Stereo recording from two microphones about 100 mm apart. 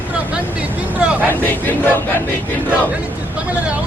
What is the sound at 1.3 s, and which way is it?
Battle cry, 20° left (ahead or behind).